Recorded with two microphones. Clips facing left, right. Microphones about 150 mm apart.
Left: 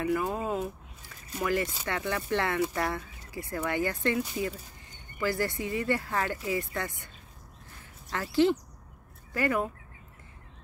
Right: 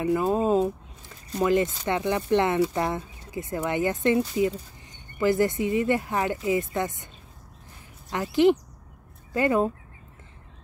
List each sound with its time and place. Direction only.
0.0 s speech: 25° right (ahead or behind)
8.1 s speech: 20° right (ahead or behind)